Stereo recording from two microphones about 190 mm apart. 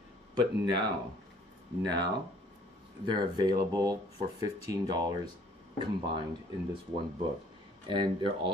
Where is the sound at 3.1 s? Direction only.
20° right (ahead or behind).